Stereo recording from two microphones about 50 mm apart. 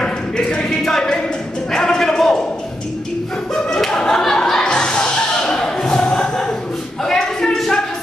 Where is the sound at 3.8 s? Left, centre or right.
Centre.